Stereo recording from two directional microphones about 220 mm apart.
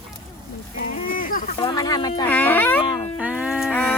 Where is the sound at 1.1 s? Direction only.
40° left (ahead or behind).